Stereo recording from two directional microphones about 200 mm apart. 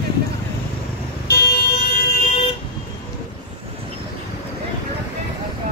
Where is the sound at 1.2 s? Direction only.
55° left (ahead or behind).